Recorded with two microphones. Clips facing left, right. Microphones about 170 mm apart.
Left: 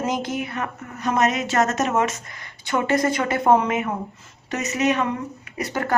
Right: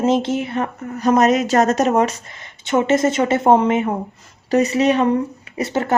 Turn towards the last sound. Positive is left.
turn(degrees=-25)  # may be behind; listen again after turning